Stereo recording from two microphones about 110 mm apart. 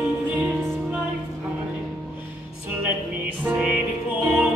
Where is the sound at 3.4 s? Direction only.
10° right (ahead or behind).